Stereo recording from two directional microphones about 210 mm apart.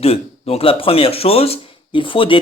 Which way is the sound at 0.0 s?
30° left (ahead or behind).